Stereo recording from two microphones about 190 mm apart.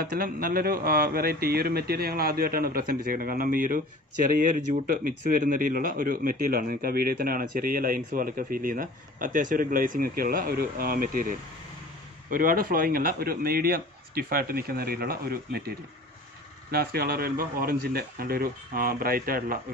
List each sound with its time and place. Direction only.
0.0 s a man's voice: 50° right (ahead or behind)
16.7 s a man's voice: 55° right (ahead or behind)